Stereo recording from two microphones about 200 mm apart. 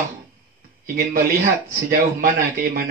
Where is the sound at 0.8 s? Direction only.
50° right (ahead or behind).